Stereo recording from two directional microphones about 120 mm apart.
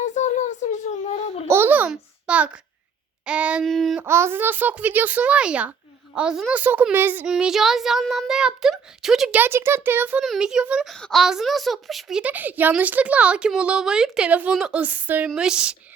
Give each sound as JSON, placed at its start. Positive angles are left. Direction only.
{"t": 0.0, "sound": "a sound", "side_deg": 85}
{"t": 1.5, "sound": "babbling", "side_deg": -20}
{"t": 1.9, "sound": "a child's voice", "side_deg": -10}
{"t": 3.6, "sound": "a child's voice", "side_deg": 0}
{"t": 4.0, "sound": "a woman's voice", "side_deg": -20}
{"t": 7.3, "sound": "a child's voice", "side_deg": -5}
{"t": 9.4, "sound": "a woman's voice", "side_deg": -20}
{"t": 10.2, "sound": "a child's voice", "side_deg": -5}